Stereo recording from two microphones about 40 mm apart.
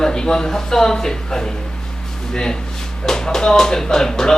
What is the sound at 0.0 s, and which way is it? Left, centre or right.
Speech, centre.